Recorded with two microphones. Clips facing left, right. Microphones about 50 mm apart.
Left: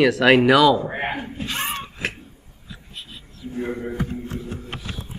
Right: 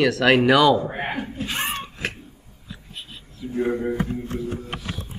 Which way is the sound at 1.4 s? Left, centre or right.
Centre.